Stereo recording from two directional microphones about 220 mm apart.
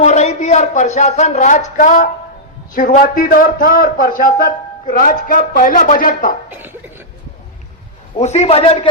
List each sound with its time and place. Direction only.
0.0 s speech: 30° left (ahead or behind)
6.5 s speech: 10° right (ahead or behind)
8.2 s a man's voice: 30° left (ahead or behind)